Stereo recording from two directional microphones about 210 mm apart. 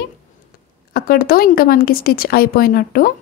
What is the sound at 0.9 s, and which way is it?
A woman's voice, 45° left (ahead or behind).